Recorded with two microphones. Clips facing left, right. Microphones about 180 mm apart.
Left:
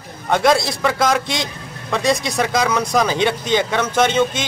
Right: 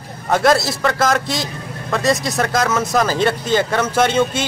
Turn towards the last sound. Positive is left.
turn(degrees=-10)  # may be behind; listen again after turning